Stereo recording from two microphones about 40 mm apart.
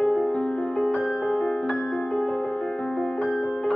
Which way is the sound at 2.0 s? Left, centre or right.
Left.